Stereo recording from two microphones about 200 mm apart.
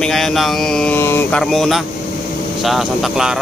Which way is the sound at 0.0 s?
Centre (ahead or behind).